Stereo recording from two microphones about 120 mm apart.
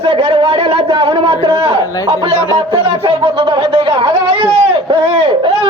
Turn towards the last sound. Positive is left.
turn(degrees=-50)  # may be behind; listen again after turning